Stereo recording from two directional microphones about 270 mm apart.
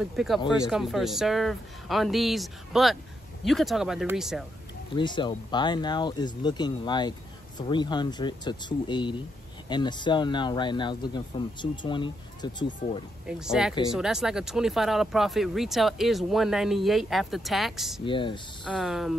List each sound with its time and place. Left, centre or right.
0.0 s speech: centre
4.9 s speech: centre
13.3 s speech: centre
18.0 s speech: centre
18.6 s speech: centre